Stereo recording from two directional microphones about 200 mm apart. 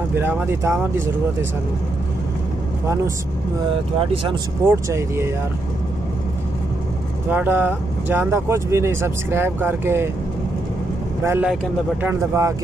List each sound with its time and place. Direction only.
0.1 s speech: 10° right (ahead or behind)
4.6 s speech: 15° right (ahead or behind)
7.2 s speech: 10° right (ahead or behind)
11.2 s speech: 10° right (ahead or behind)